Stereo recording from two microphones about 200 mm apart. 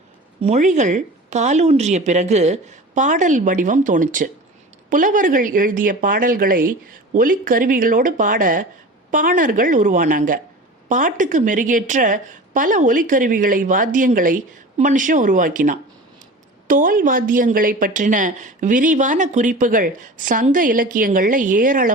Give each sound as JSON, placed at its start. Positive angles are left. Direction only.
{"t": 0.4, "sound": "a woman's voice", "side_deg": -35}